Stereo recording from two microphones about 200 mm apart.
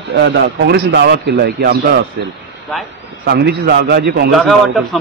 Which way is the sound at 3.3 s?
55° right (ahead or behind).